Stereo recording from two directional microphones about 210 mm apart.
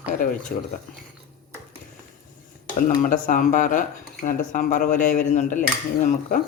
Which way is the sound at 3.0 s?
40° left (ahead or behind).